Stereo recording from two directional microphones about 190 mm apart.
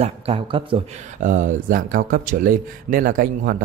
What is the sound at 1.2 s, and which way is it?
A man's voice, 45° right (ahead or behind).